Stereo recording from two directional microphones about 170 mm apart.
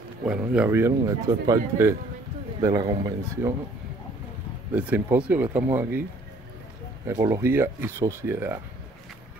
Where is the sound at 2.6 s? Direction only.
20° right (ahead or behind).